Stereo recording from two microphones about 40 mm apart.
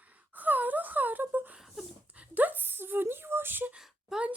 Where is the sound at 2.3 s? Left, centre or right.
Right.